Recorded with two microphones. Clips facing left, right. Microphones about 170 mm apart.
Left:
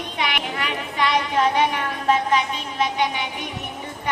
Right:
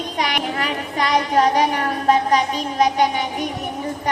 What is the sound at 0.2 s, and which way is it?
A woman's voice, 40° right (ahead or behind).